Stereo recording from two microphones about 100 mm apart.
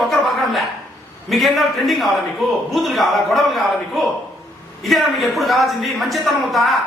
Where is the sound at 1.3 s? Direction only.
Centre (ahead or behind).